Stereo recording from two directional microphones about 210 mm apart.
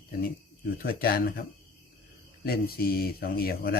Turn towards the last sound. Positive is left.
turn(degrees=45)  # may be behind; listen again after turning